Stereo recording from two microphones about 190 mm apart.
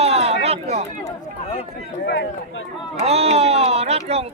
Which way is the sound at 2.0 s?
65° left (ahead or behind).